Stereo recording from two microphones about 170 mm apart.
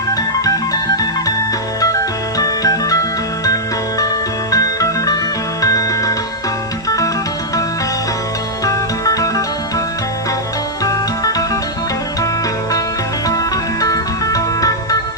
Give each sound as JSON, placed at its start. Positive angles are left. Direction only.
{"t": 0.1, "sound": "organ", "side_deg": 20}
{"t": 1.8, "sound": "music", "side_deg": 20}
{"t": 8.6, "sound": "music", "side_deg": 20}
{"t": 10.8, "sound": "music", "side_deg": 20}
{"t": 13.2, "sound": "music", "side_deg": 20}